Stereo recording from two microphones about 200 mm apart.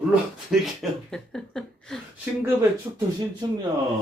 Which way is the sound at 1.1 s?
5° left (ahead or behind).